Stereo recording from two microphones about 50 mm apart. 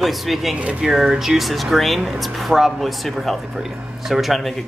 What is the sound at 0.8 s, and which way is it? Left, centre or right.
A woman's voice, centre.